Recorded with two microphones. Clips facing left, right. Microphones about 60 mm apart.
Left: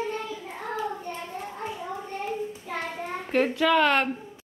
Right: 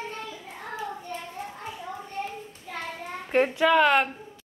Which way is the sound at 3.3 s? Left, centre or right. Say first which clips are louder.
Right 1 dB; centre.